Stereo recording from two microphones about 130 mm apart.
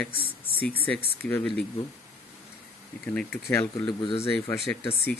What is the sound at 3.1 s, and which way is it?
Speech, 15° left (ahead or behind).